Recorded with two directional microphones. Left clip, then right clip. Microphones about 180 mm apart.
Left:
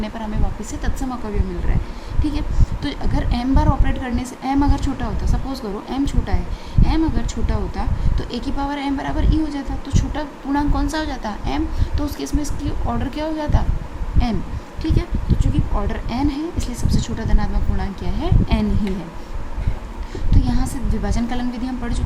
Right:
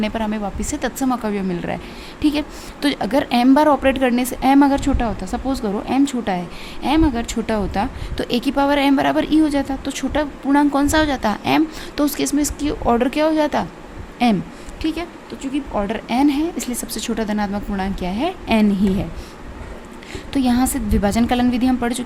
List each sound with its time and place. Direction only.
0.0 s a woman's voice: 55° right (ahead or behind)
20.3 s a woman's voice: 55° right (ahead or behind)